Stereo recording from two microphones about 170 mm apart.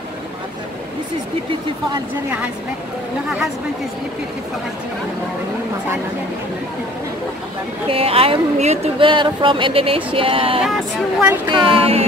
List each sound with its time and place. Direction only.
7.9 s speech: 35° right (ahead or behind)
10.6 s speech: 5° right (ahead or behind)
11.4 s speech: 30° right (ahead or behind)